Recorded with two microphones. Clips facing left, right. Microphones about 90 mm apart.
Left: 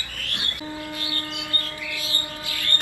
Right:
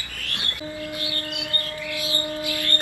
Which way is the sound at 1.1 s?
25° left (ahead or behind).